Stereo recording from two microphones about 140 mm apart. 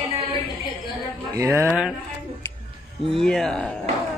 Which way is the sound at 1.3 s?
20° right (ahead or behind).